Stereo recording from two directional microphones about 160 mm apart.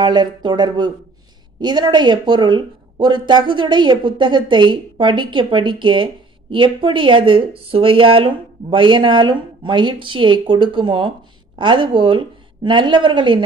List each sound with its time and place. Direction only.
0.0 s a woman's voice: 25° right (ahead or behind)